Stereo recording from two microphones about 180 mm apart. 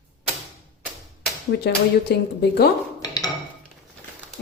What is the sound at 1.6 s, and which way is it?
A woman's voice, 65° left (ahead or behind).